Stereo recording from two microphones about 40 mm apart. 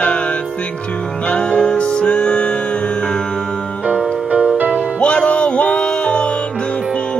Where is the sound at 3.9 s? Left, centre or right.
Right.